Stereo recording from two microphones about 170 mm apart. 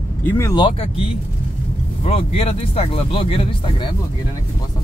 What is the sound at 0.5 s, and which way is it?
Speech, 30° left (ahead or behind).